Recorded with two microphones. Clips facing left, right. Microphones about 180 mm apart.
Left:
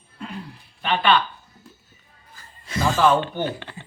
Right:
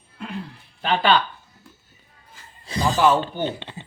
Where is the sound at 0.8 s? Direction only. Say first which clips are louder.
Right 1 dB; 30° right (ahead or behind).